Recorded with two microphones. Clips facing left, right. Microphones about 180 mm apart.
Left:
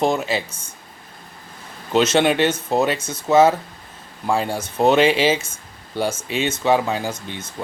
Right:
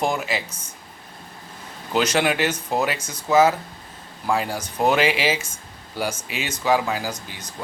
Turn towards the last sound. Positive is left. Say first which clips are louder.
# left 3 dB
turn(degrees=25)  # may be behind; listen again after turning